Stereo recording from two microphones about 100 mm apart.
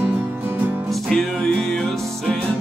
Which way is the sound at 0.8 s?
Centre (ahead or behind).